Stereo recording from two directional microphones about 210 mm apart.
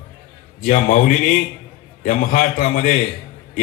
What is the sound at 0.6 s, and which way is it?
A man's voice, 40° left (ahead or behind).